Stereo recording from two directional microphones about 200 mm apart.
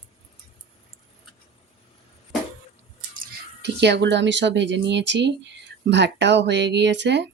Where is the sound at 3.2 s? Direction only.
60° right (ahead or behind).